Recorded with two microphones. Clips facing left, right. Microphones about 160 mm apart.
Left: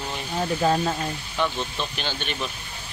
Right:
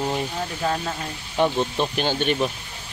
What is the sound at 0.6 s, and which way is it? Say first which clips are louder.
Speech: left 3 dB; 30° left (ahead or behind).